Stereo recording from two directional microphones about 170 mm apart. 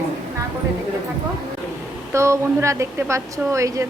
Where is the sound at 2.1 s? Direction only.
15° right (ahead or behind).